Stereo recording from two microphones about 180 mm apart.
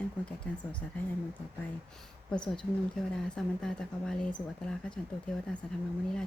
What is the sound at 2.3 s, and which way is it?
Speech, 5° left (ahead or behind).